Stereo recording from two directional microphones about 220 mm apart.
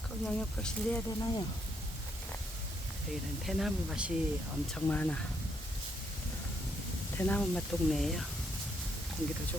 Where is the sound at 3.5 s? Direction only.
Centre (ahead or behind).